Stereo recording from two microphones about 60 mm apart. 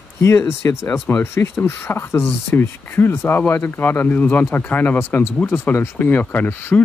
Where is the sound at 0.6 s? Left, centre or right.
Left.